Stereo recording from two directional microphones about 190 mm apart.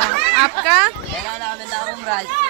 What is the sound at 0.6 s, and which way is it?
Speech, 5° right (ahead or behind).